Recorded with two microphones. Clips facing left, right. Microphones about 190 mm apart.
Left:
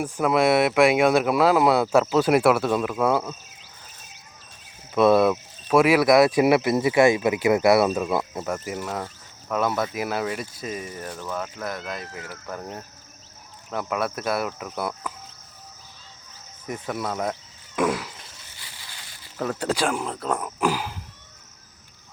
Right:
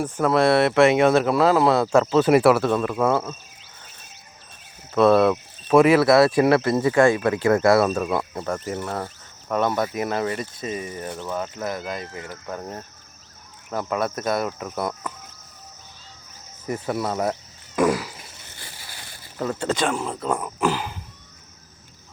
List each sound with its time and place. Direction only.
0.0 s speech: 10° left (ahead or behind)
4.9 s speech: 10° left (ahead or behind)
16.9 s speech: 5° right (ahead or behind)
17.7 s fart: centre (ahead or behind)
18.5 s a sound: 50° right (ahead or behind)
19.4 s speech: centre (ahead or behind)